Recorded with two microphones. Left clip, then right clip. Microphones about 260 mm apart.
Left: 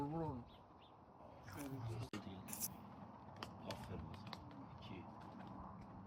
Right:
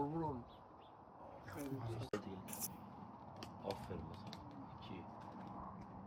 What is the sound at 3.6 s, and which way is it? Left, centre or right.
Creak, right.